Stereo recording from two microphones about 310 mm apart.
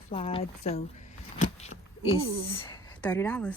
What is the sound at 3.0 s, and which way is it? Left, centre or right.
Speech, centre.